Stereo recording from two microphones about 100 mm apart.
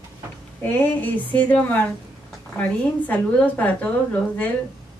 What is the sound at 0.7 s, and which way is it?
A woman's voice, 15° left (ahead or behind).